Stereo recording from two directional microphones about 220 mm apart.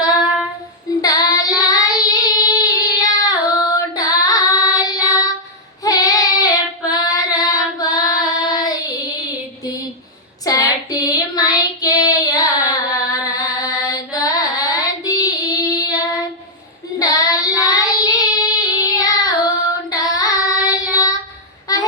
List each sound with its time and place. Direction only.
1.0 s child singing: 15° left (ahead or behind)
10.4 s child singing: 15° left (ahead or behind)
20.9 s female singing: 15° left (ahead or behind)
21.7 s a sound: 15° left (ahead or behind)